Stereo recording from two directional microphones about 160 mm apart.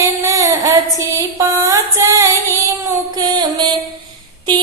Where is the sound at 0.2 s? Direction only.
20° right (ahead or behind).